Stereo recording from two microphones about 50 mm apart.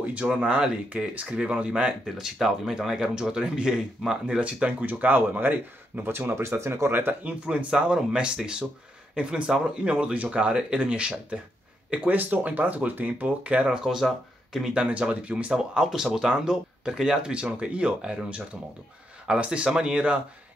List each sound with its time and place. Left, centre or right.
0.0 s a sound: right
0.3 s speech: right
2.1 s speech: centre
4.4 s speech: right
4.8 s speech: right
6.1 s speech: right
6.9 s speech: right
7.4 s speech: right
13.8 s speech: centre
14.7 s speech: right
15.5 s speech: centre
17.3 s speech: right